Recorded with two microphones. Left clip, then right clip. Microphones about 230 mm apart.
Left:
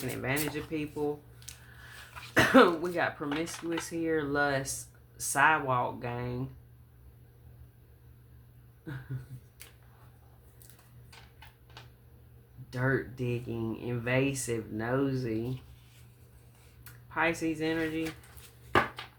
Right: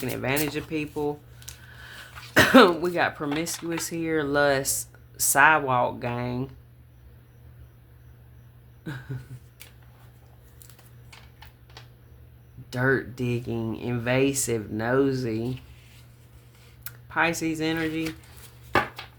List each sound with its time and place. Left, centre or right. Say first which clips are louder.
0.0 s speech: right 6 dB; right
1.5 s a sound: right 5 dB; centre
2.3 s speech: right 6 dB; right
8.9 s speech: right 6 dB; right
12.7 s speech: right 7 dB; right
16.8 s speech: right 5 dB; right